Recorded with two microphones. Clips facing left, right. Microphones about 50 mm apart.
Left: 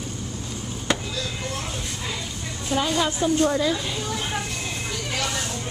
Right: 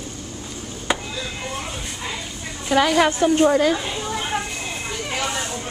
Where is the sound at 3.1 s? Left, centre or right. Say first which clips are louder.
Right 4 dB; right.